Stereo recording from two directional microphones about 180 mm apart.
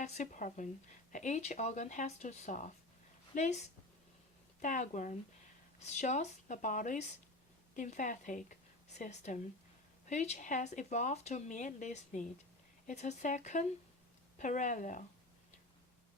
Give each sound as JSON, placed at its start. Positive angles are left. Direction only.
{"t": 0.0, "sound": "a woman's voice", "side_deg": 40}